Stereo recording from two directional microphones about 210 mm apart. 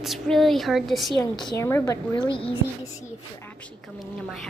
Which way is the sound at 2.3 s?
25° left (ahead or behind).